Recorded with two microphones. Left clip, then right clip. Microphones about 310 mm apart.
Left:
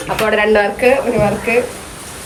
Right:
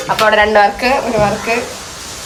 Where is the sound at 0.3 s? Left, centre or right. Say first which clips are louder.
Right 3 dB; centre.